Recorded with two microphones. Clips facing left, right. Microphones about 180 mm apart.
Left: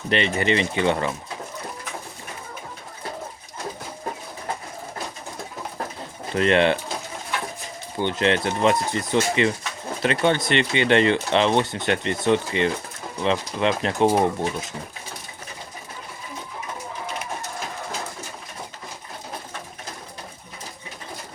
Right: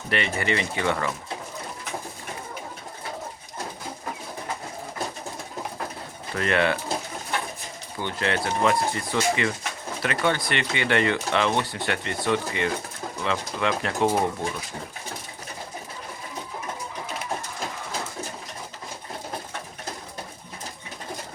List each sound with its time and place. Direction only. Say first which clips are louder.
0.1 s speech: left 4 dB; 20° left (ahead or behind)
6.3 s speech: left 5 dB; 25° left (ahead or behind)
7.9 s speech: left 5 dB; 20° left (ahead or behind)